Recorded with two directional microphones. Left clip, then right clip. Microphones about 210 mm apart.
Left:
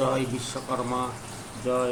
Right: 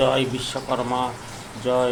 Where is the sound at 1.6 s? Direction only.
20° right (ahead or behind).